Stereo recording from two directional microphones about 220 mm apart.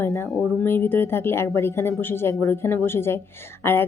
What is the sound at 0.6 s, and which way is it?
Speech, 10° left (ahead or behind).